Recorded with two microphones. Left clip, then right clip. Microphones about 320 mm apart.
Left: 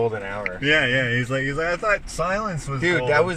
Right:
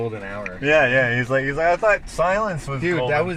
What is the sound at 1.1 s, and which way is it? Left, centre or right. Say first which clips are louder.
Speech: right 3 dB; centre.